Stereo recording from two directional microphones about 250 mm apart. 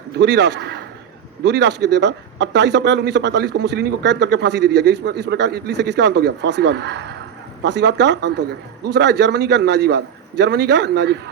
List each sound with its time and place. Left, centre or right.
0.2 s speech: right